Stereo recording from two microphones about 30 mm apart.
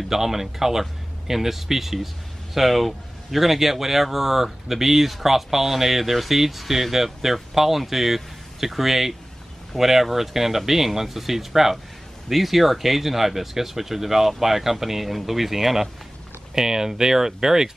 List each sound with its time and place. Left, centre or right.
0.1 s speech: centre